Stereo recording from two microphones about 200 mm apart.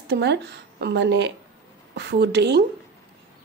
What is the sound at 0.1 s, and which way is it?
A woman's voice, 60° right (ahead or behind).